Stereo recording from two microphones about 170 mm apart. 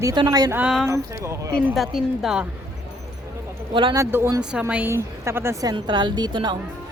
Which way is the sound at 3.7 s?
30° right (ahead or behind).